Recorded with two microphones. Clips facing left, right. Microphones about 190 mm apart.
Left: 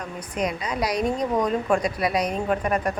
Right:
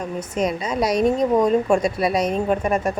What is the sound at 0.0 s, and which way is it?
A woman's voice, 25° right (ahead or behind).